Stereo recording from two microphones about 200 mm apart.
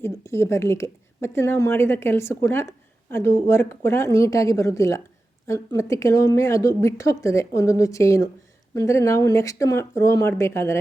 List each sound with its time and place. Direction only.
0.0 s a woman's voice: 15° left (ahead or behind)